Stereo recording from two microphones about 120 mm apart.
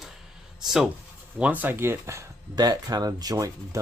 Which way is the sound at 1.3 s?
10° right (ahead or behind).